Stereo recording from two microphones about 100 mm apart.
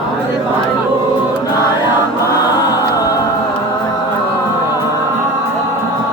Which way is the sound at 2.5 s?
40° left (ahead or behind).